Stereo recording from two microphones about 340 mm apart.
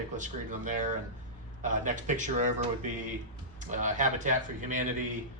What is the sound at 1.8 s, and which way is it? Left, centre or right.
A man's voice, right.